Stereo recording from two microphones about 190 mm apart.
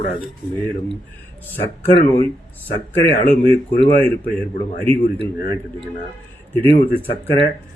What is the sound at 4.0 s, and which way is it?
Speech, 10° left (ahead or behind).